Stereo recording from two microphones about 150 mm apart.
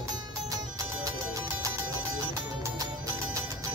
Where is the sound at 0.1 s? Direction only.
25° right (ahead or behind).